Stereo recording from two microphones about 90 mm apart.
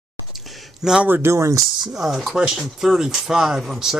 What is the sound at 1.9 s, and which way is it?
Speech, centre (ahead or behind).